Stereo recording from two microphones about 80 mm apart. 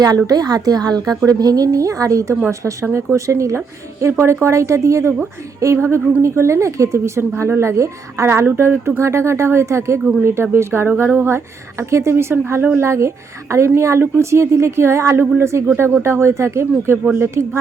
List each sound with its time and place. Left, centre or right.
0.3 s a woman's voice: right